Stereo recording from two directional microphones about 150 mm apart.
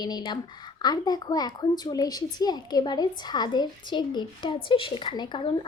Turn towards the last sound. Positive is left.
turn(degrees=30)  # may be behind; listen again after turning